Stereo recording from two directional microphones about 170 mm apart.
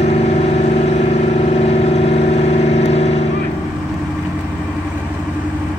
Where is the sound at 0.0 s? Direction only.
40° left (ahead or behind).